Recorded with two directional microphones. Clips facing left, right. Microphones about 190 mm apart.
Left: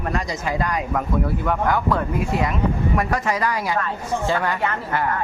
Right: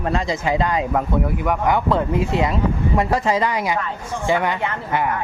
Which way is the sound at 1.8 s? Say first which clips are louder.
Right 3 dB; 25° right (ahead or behind).